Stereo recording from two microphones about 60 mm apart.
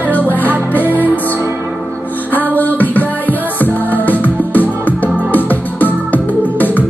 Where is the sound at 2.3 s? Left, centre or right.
Left.